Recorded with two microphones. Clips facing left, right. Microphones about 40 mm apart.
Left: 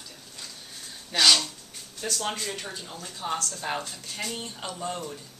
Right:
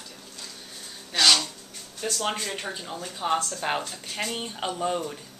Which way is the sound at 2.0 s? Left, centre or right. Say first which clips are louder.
Right 2 dB; centre.